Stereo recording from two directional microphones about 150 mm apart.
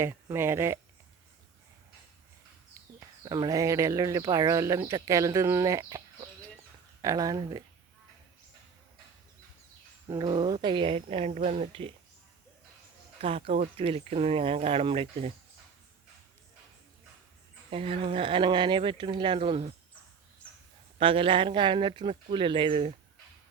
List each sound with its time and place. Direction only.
0.0 s speech: 15° right (ahead or behind)
3.2 s speech: 25° right (ahead or behind)
7.0 s speech: 25° right (ahead or behind)
10.1 s speech: 30° right (ahead or behind)
13.2 s speech: 40° right (ahead or behind)
17.7 s speech: 40° right (ahead or behind)
21.0 s speech: 35° right (ahead or behind)